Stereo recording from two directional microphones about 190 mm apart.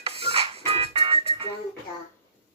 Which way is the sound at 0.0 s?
30° right (ahead or behind).